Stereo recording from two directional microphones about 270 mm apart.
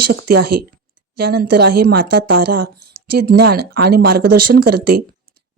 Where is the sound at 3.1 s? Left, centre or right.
Right.